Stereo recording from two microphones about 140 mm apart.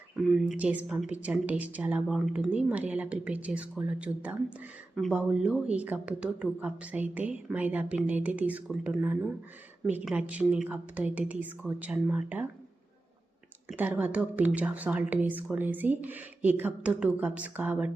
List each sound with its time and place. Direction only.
0.3 s a woman's voice: 5° right (ahead or behind)
13.7 s a woman's voice: 10° right (ahead or behind)